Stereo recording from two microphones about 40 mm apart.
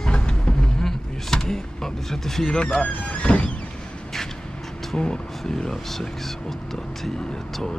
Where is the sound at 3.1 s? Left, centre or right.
Left.